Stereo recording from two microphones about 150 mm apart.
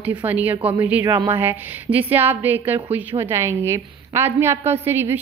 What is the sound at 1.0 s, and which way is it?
A woman's voice, 20° right (ahead or behind).